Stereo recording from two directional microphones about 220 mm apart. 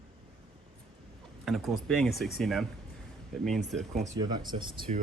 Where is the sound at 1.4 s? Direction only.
Centre (ahead or behind).